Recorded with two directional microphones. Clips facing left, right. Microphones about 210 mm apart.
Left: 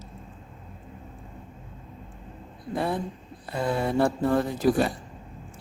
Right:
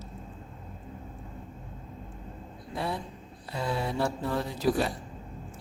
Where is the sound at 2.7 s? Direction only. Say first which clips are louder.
Left 6 dB; 50° left (ahead or behind).